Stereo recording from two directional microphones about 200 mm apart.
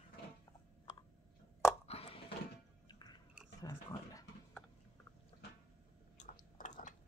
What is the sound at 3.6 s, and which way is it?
Typing, 15° left (ahead or behind).